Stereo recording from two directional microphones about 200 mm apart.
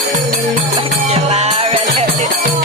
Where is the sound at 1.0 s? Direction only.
30° right (ahead or behind).